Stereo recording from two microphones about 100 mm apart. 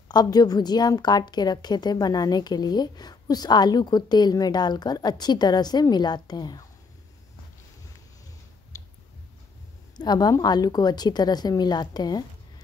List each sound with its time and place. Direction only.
0.1 s a woman's voice: 40° left (ahead or behind)
8.7 s a sound: 35° left (ahead or behind)
9.9 s a woman's voice: 45° left (ahead or behind)